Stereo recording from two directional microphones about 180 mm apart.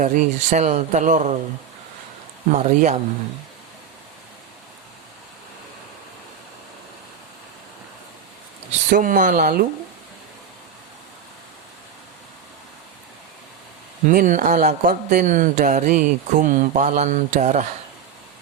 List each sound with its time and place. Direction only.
0.0 s speech: 45° right (ahead or behind)
2.5 s speech: 40° right (ahead or behind)
8.9 s speech: 50° right (ahead or behind)
14.1 s speech: 45° right (ahead or behind)